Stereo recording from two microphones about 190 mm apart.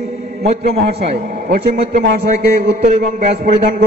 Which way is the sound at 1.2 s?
50° right (ahead or behind).